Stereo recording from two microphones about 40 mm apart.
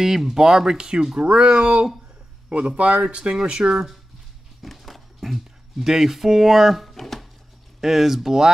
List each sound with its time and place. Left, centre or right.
0.0 s speech: centre
1.2 s speech: right
3.2 s speech: centre
4.6 s a sound: centre
5.2 s speech: centre
7.8 s speech: centre